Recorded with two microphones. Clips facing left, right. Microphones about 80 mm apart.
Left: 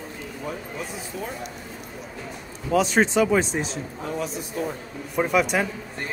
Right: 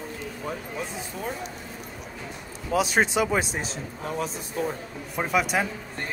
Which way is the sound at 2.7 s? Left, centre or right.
Centre.